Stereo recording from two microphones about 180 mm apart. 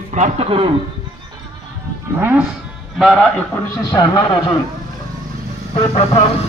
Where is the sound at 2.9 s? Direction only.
5° left (ahead or behind).